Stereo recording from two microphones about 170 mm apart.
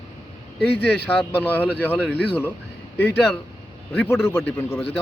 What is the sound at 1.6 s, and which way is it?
Speech, 10° right (ahead or behind).